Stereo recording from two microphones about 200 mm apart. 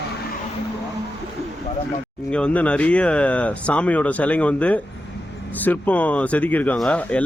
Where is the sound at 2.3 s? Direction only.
5° left (ahead or behind).